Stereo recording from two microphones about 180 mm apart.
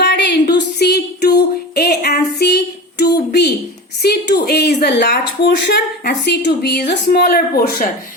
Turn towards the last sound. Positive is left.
turn(degrees=50)  # may be behind; listen again after turning